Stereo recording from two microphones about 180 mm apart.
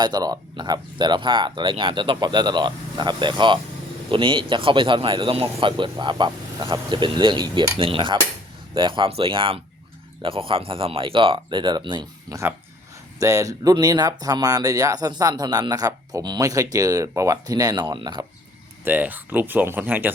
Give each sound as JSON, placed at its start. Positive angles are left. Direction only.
{"t": 0.0, "sound": "speech", "side_deg": -20}
{"t": 18.9, "sound": "speech", "side_deg": -10}